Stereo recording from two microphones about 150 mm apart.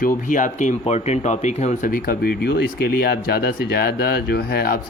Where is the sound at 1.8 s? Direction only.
75° left (ahead or behind).